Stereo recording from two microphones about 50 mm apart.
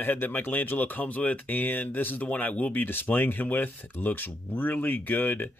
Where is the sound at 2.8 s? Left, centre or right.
Left.